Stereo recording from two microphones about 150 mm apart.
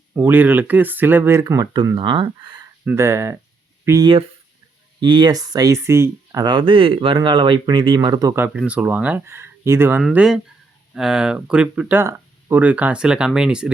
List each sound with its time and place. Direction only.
0.1 s speech: 10° right (ahead or behind); by 2.6 s 30° right (ahead or behind)
2.8 s speech: 15° right (ahead or behind)
4.9 s speech: 30° right (ahead or behind)
6.4 s speech: 30° right (ahead or behind)
8.5 s speech: 5° right (ahead or behind)